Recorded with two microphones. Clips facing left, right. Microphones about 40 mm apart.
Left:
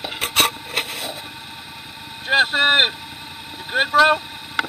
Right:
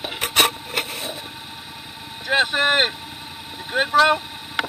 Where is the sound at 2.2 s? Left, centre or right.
Left.